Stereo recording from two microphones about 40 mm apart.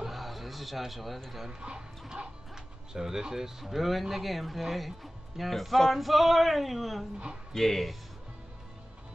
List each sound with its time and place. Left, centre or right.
0.0 s music: centre
1.5 s speech: right; by 8.0 s centre